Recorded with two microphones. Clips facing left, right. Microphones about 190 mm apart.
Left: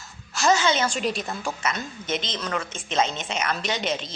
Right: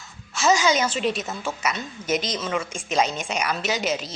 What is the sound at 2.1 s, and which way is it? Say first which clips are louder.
Speech: right 4 dB; 30° left (ahead or behind).